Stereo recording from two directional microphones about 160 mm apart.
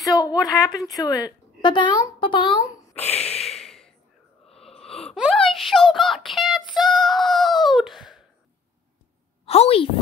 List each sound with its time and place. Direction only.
0.0 s a woman's voice: 20° left (ahead or behind); by 3.5 s 40° left (ahead or behind)
3.5 s snort: centre (ahead or behind)
5.1 s gasp: centre (ahead or behind)
5.9 s synthetic singing: centre (ahead or behind)
9.5 s a woman's voice: 40° left (ahead or behind)